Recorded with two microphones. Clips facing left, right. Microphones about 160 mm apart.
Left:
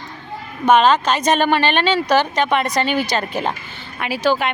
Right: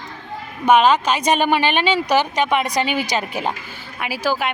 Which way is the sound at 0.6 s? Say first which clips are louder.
Left 1 dB; 10° right (ahead or behind).